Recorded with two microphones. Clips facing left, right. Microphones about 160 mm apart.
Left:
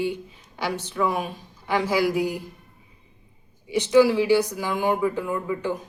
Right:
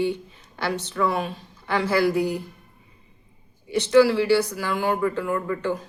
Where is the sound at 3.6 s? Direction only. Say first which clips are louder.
Even; 15° left (ahead or behind).